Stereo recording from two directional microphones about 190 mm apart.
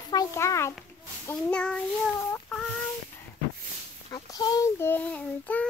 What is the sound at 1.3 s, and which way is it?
Child singing, 5° left (ahead or behind).